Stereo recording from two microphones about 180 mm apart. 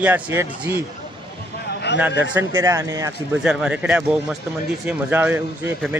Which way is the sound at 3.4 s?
5° right (ahead or behind).